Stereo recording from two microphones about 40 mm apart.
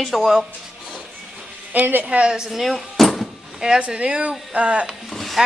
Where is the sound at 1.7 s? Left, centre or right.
Right.